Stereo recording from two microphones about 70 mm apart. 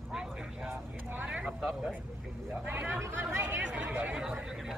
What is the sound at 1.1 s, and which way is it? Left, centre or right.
Speech, right.